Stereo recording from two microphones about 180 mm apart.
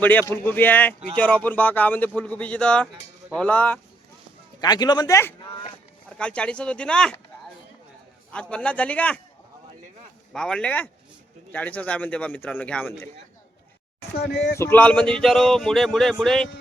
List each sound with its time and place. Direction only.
0.0 s a man's voice: 10° left (ahead or behind)
2.8 s speech: 5° right (ahead or behind)
3.4 s a man's voice: 10° left (ahead or behind)
4.6 s speech: 20° left (ahead or behind)
6.1 s a sound: 5° left (ahead or behind)
8.3 s a man's voice: 5° left (ahead or behind)
10.3 s a sound: 5° left (ahead or behind)
11.5 s a man's voice: 10° left (ahead or behind)
14.2 s speech: 65° left (ahead or behind)
14.6 s a sound: 10° left (ahead or behind)